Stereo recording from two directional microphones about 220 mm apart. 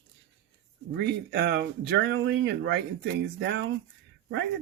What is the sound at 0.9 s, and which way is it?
Speech, 50° right (ahead or behind).